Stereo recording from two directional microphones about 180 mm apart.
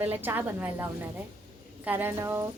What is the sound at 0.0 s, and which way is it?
A woman's voice, 10° right (ahead or behind).